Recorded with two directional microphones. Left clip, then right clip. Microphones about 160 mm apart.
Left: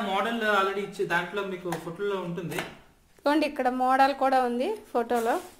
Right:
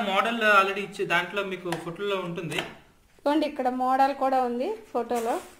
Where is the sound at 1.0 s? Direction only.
15° right (ahead or behind).